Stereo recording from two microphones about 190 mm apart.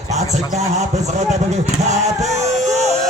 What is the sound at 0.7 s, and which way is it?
Speech, 35° right (ahead or behind).